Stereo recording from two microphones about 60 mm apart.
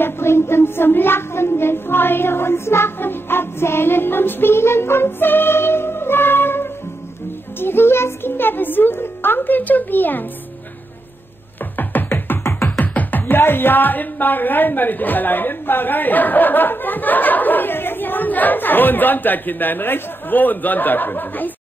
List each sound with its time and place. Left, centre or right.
0.0 s speech: left
11.7 s music: left
12.7 s speech: left